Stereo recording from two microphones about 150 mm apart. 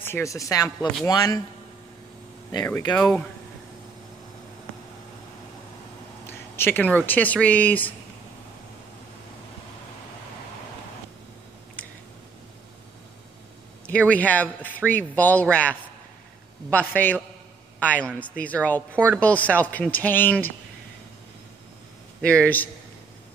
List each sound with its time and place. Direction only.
0.0 s speech: 15° left (ahead or behind)
2.9 s speech: 5° left (ahead or behind)
6.5 s speech: 15° left (ahead or behind)
13.8 s speech: 10° left (ahead or behind)
22.2 s speech: 10° left (ahead or behind)